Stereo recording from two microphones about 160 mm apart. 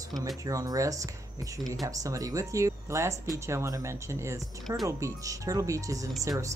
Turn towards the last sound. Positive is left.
turn(degrees=-20)  # may be behind; listen again after turning